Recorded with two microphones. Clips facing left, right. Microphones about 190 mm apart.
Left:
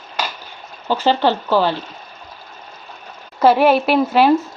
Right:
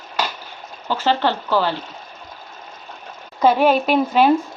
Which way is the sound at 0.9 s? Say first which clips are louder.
Left 3 dB; 15° left (ahead or behind).